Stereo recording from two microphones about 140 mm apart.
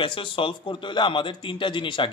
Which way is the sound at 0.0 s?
40° left (ahead or behind).